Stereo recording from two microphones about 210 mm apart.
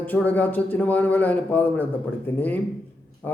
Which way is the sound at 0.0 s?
10° left (ahead or behind).